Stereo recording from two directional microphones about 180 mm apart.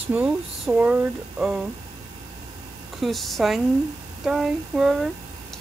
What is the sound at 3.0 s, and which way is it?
Speech, centre (ahead or behind).